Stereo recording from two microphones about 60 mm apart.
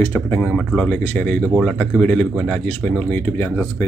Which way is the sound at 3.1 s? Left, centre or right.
Left.